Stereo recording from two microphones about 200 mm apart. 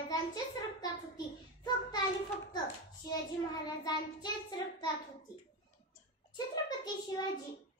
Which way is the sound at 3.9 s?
20° left (ahead or behind).